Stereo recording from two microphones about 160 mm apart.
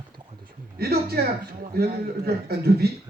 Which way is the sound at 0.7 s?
75° right (ahead or behind).